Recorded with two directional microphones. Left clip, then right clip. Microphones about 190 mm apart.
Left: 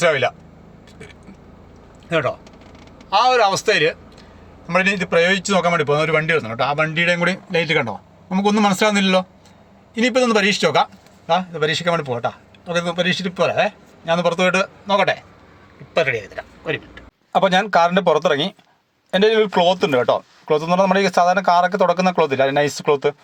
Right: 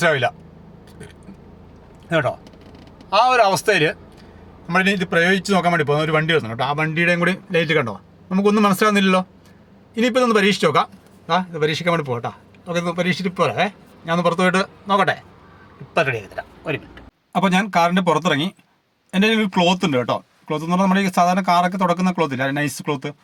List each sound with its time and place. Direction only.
0.0 s speech: 20° right (ahead or behind)
2.0 s a man's voice: 20° right (ahead or behind)
17.3 s a man's voice: 5° right (ahead or behind)